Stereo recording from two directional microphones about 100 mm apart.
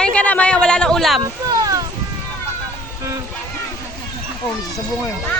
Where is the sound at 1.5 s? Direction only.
35° right (ahead or behind).